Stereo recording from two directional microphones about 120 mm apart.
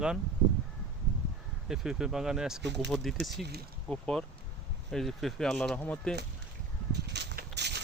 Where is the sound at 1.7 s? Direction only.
5° right (ahead or behind).